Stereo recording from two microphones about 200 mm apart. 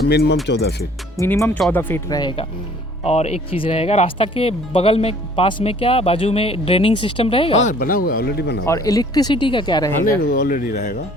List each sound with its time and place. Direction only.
0.0 s speech: 55° left (ahead or behind)
1.2 s speech: 15° left (ahead or behind); by 8.6 s 50° left (ahead or behind)
8.6 s speech: 15° left (ahead or behind)
10.2 s speech: 40° left (ahead or behind)